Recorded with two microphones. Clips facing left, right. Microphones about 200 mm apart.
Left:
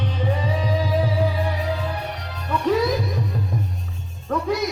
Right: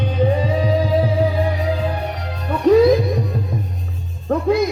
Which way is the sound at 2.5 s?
45° right (ahead or behind).